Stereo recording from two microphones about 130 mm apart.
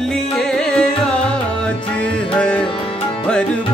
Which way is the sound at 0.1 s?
5° left (ahead or behind).